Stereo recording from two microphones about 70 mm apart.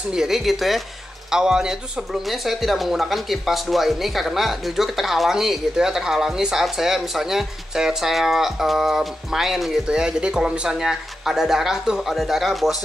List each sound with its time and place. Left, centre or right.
0.1 s speech: centre